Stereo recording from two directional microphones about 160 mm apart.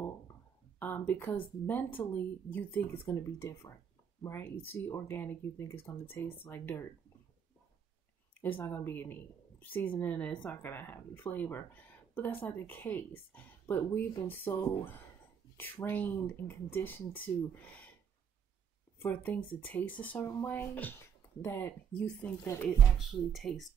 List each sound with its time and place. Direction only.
0.7 s speech: 10° left (ahead or behind)
8.4 s speech: 15° left (ahead or behind)
15.5 s speech: 15° left (ahead or behind)
19.0 s speech: 10° left (ahead or behind)
22.9 s speech: centre (ahead or behind)